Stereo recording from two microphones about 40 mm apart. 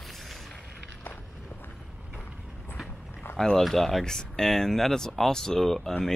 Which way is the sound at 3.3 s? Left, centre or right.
Left.